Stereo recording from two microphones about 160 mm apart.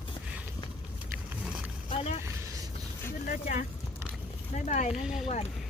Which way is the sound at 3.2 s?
55° left (ahead or behind).